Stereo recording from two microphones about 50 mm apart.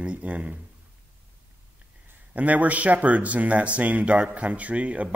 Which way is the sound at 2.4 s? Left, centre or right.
Right.